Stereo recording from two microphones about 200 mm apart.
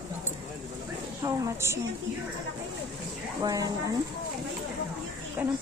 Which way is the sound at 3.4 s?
15° right (ahead or behind).